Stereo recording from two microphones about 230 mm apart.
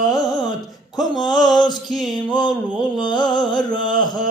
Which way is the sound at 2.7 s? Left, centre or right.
Centre.